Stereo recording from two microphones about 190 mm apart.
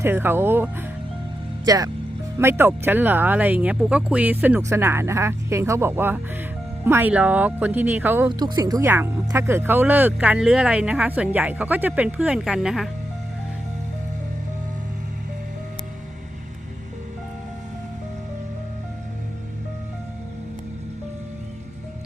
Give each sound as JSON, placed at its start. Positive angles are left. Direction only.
{"t": 0.0, "sound": "speech", "side_deg": -10}